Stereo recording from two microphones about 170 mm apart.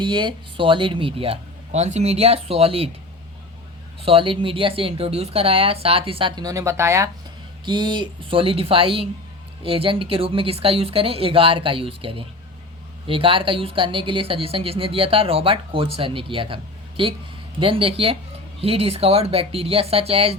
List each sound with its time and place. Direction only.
0.0 s speech: 25° right (ahead or behind)
4.0 s speech: 30° right (ahead or behind); by 7.1 s 15° right (ahead or behind)
7.6 s speech: 25° right (ahead or behind)